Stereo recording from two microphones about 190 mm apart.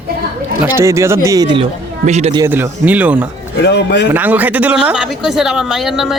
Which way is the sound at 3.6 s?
65° left (ahead or behind).